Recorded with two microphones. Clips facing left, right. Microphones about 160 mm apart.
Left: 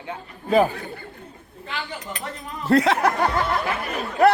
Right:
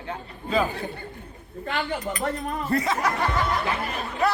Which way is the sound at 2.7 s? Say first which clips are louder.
Left 7 dB; 75° left (ahead or behind).